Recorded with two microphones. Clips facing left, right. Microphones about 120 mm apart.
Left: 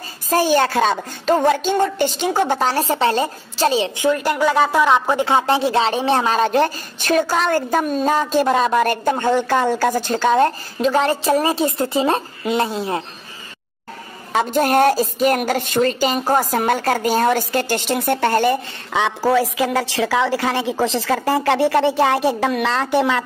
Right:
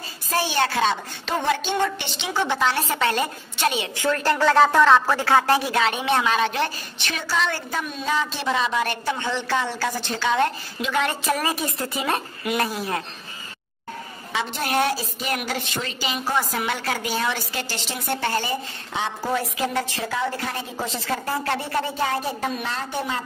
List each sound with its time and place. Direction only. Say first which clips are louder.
0.3 s a woman's voice: left 7 dB; 45° left (ahead or behind)
3.9 s a woman's voice: left 4 dB; 15° left (ahead or behind)
14.3 s a woman's voice: left 8 dB; 45° left (ahead or behind); by 23.2 s 85° left